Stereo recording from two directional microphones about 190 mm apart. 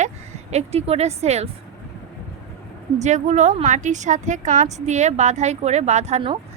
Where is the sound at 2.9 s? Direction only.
35° right (ahead or behind).